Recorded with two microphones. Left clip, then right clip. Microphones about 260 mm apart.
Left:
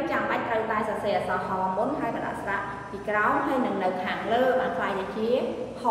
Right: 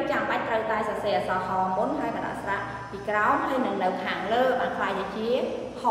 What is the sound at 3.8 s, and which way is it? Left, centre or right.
A woman's voice, centre.